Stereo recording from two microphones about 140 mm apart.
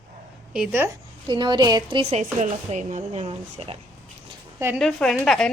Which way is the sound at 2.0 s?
50° right (ahead or behind).